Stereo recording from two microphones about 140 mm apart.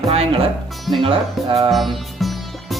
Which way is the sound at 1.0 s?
40° right (ahead or behind).